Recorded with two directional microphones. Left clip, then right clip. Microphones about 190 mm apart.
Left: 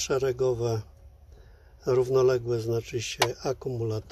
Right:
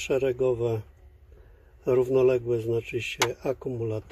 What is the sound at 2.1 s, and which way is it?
Speech, 10° right (ahead or behind).